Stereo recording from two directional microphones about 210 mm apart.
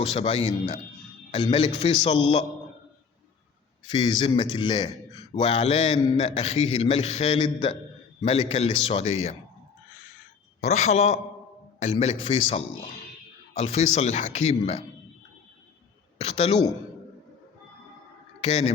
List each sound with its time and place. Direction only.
0.0 s a man's voice: 30° left (ahead or behind)
3.8 s a man's voice: 20° left (ahead or behind)
10.6 s a man's voice: 35° left (ahead or behind)
16.1 s speech: 30° left (ahead or behind)
18.4 s a man's voice: 30° left (ahead or behind)